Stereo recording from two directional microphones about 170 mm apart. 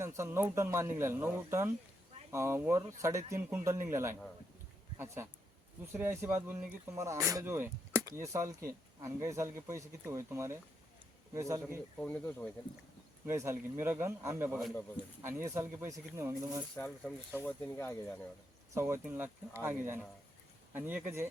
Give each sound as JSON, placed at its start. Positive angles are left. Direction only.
{"t": 0.0, "sound": "speech", "side_deg": -15}
{"t": 11.9, "sound": "speech", "side_deg": 10}
{"t": 13.2, "sound": "speech", "side_deg": -15}
{"t": 16.7, "sound": "speech", "side_deg": 10}
{"t": 18.7, "sound": "speech", "side_deg": -15}